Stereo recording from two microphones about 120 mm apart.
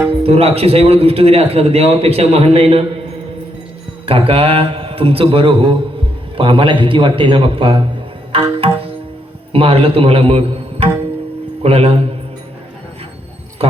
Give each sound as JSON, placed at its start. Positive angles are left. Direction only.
{"t": 0.2, "sound": "a man's voice", "side_deg": -55}
{"t": 4.0, "sound": "a man's voice", "side_deg": -50}
{"t": 8.3, "sound": "tabla", "side_deg": -50}
{"t": 9.5, "sound": "a man's voice", "side_deg": -50}